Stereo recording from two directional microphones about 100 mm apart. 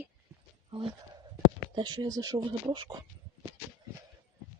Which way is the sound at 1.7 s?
50° right (ahead or behind).